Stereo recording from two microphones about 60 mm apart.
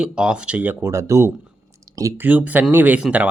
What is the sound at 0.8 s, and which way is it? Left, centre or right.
Speech, right.